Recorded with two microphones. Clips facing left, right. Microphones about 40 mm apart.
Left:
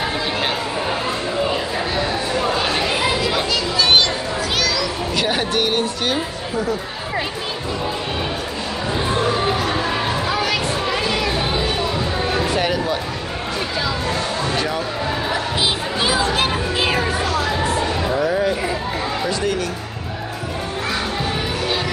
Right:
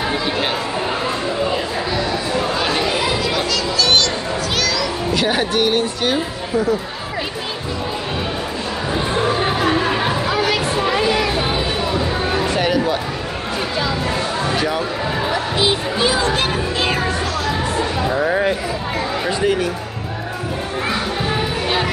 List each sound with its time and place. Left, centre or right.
2.5 s chatter: centre
3.3 s music: centre
4.6 s children playing: centre
10.3 s a sound: centre
12.5 s a sound: centre
14.6 s speech: centre
15.3 s music: centre
18.2 s a sound: right
19.2 s speech: centre